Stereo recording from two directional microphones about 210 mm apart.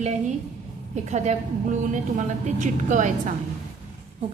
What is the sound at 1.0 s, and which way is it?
A woman's voice, 35° right (ahead or behind).